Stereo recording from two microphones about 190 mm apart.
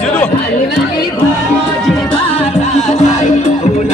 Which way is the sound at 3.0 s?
35° left (ahead or behind).